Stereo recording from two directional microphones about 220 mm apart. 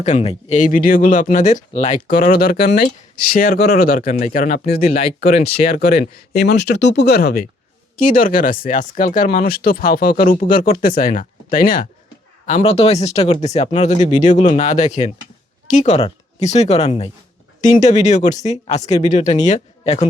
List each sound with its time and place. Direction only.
0.0 s speech: 30° left (ahead or behind)